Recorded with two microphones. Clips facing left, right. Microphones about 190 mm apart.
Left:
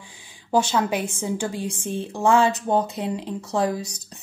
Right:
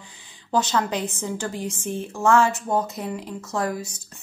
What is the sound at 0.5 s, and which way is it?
A woman's voice, 10° left (ahead or behind).